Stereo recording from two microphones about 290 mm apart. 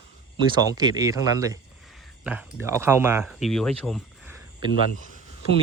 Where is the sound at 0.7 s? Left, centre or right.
Centre.